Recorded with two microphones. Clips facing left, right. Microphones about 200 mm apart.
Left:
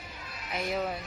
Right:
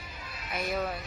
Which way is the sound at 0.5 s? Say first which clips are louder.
Even; 20° left (ahead or behind).